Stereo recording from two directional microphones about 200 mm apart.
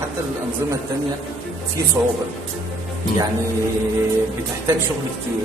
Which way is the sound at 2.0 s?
10° right (ahead or behind).